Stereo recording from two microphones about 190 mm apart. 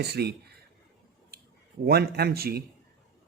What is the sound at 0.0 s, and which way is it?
Speech, 60° right (ahead or behind).